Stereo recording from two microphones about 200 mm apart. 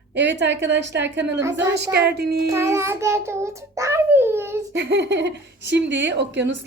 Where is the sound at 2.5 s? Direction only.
15° right (ahead or behind).